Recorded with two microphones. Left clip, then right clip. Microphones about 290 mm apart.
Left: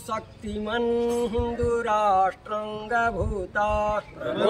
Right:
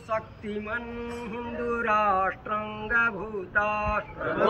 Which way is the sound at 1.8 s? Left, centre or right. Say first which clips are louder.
Left 2 dB; centre.